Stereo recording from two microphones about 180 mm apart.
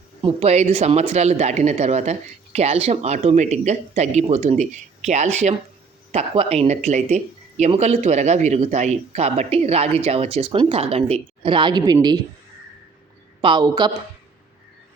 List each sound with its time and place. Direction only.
0.2 s speech: 35° right (ahead or behind)
13.4 s speech: 25° right (ahead or behind)